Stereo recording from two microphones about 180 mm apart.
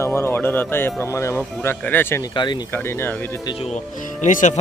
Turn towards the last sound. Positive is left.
turn(degrees=45)  # may be behind; listen again after turning